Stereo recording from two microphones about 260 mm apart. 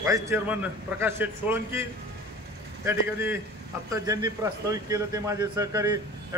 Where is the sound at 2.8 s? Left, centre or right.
Centre.